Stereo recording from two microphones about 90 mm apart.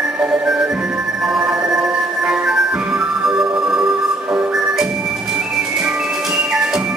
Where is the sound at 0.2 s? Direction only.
10° right (ahead or behind).